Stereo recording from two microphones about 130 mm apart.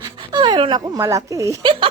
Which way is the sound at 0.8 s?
25° right (ahead or behind).